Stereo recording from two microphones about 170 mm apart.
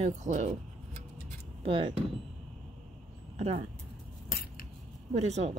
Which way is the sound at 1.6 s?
30° right (ahead or behind).